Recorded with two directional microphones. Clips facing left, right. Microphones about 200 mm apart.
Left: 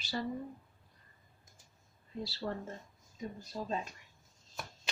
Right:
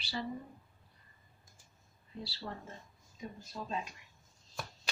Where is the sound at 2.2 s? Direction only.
45° left (ahead or behind).